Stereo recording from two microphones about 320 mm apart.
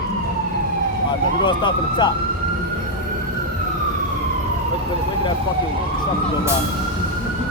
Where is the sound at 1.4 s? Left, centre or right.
Centre.